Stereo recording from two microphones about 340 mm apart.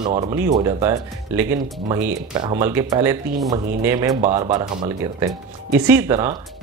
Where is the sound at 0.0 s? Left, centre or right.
Centre.